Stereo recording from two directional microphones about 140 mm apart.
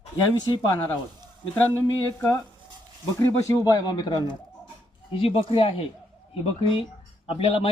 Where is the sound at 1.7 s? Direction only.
15° left (ahead or behind).